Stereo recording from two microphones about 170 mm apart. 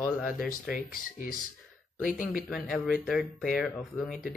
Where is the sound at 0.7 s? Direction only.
55° left (ahead or behind).